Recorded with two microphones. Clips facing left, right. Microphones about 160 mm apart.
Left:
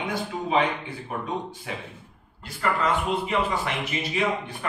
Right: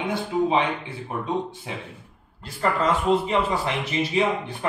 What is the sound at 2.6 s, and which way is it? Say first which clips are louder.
Speech: right 2 dB; 35° right (ahead or behind).